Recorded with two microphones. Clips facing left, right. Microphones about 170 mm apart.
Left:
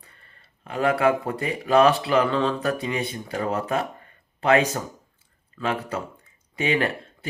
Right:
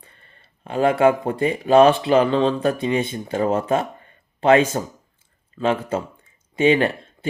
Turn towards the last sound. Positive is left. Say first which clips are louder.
# right 5 dB
turn(degrees=-25)  # may be behind; listen again after turning